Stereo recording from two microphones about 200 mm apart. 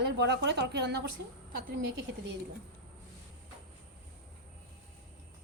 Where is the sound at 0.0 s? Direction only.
60° right (ahead or behind).